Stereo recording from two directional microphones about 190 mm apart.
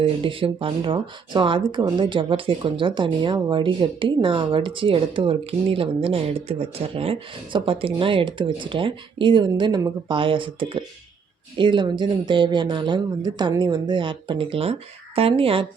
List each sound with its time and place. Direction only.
0.0 s speech: 30° right (ahead or behind)